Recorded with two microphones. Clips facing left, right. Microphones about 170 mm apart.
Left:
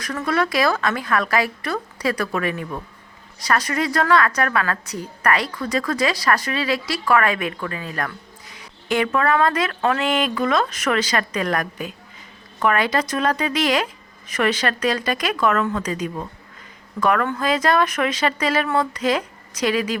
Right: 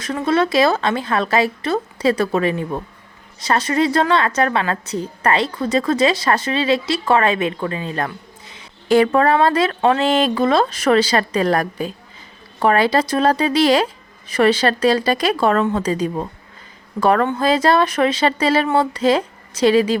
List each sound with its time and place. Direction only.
0.0 s a woman's voice: 25° right (ahead or behind)